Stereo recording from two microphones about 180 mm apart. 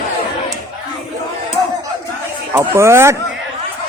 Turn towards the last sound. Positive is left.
turn(degrees=-15)  # may be behind; listen again after turning